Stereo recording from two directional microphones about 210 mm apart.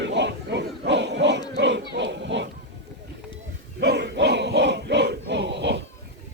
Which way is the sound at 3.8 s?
55° right (ahead or behind).